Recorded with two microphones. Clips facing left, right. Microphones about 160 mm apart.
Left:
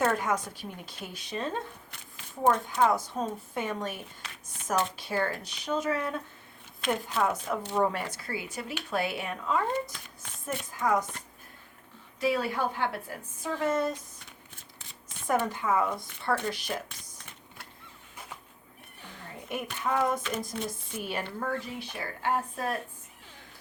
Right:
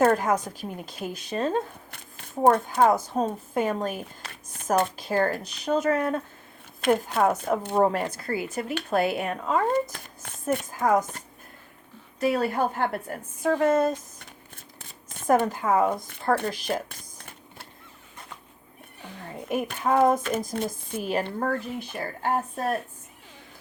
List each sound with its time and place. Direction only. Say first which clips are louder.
0.0 s speech: right 6 dB; 45° right (ahead or behind)
4.2 s speech: right 3 dB; 55° right (ahead or behind)
12.2 s speech: right 4 dB; 50° right (ahead or behind)
16.9 s a sound: right 4 dB; 50° right (ahead or behind)
19.5 s a woman's voice: right 6 dB; 45° right (ahead or behind)